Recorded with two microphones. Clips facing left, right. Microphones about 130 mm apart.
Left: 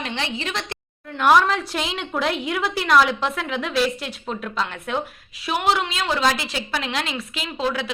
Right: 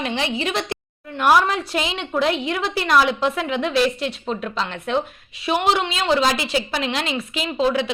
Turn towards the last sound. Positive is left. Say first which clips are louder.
# right 5 dB
turn(degrees=0)  # may be behind; listen again after turning